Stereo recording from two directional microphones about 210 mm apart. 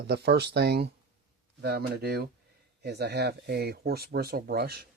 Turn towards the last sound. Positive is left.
turn(degrees=-45)  # may be behind; listen again after turning